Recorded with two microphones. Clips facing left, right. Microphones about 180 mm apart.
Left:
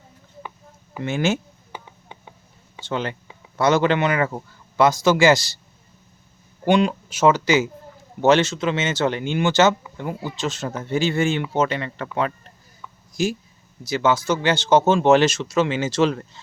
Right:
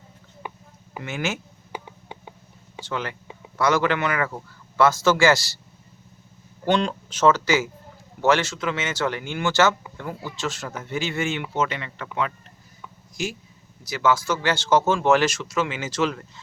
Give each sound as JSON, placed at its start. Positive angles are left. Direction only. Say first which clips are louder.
{"t": 1.0, "sound": "speech", "louder": "left 7 dB", "side_deg": 30}
{"t": 2.8, "sound": "speech", "louder": "left 4 dB", "side_deg": 25}
{"t": 6.7, "sound": "speech", "louder": "left 4 dB", "side_deg": 10}
{"t": 13.8, "sound": "speech", "louder": "left 2 dB", "side_deg": 25}